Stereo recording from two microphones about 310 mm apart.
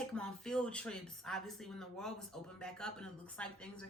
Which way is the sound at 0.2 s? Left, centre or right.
Centre.